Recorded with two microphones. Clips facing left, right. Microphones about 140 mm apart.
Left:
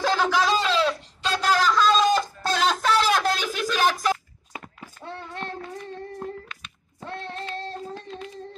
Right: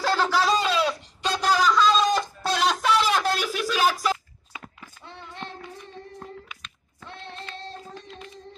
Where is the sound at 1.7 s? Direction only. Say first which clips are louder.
Left 2 dB; 5° left (ahead or behind).